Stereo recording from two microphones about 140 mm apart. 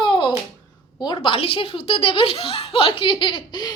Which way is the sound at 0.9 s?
30° left (ahead or behind).